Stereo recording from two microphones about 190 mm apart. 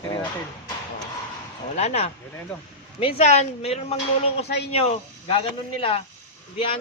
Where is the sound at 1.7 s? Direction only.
35° left (ahead or behind).